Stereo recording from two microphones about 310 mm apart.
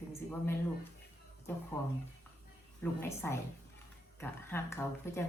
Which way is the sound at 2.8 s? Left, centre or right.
Centre.